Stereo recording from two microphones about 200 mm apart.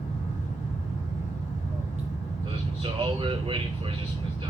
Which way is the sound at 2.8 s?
25° right (ahead or behind).